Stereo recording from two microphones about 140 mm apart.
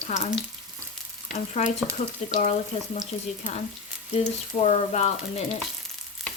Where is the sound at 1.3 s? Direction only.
60° left (ahead or behind).